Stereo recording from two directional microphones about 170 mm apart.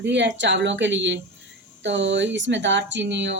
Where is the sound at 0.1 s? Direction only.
90° right.